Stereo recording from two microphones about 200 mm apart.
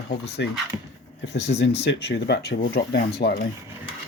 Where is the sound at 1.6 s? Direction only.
60° left (ahead or behind).